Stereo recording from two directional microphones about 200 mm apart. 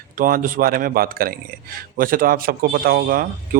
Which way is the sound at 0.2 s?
45° right (ahead or behind).